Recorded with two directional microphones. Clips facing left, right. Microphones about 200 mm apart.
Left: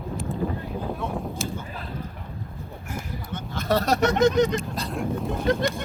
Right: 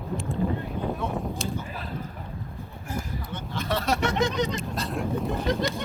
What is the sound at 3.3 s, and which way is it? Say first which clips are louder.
Vehicle: left 5 dB; 45° left (ahead or behind).